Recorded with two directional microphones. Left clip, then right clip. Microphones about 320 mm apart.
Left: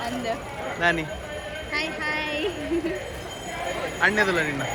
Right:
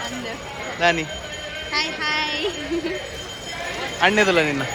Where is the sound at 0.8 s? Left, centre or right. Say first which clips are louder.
Right 4 dB; centre.